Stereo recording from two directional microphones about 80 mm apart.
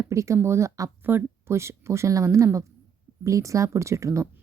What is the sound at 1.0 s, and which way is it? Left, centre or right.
A woman's voice, right.